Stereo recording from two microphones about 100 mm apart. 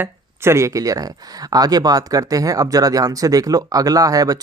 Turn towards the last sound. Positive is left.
turn(degrees=-40)  # may be behind; listen again after turning